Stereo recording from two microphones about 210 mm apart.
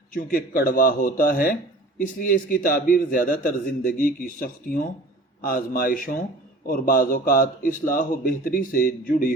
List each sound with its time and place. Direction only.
0.1 s a man's voice: 40° left (ahead or behind)